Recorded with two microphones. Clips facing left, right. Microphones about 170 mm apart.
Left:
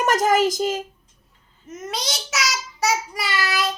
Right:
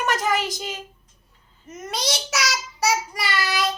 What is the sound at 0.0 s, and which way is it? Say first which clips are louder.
Speech: left 5 dB; 45° left (ahead or behind).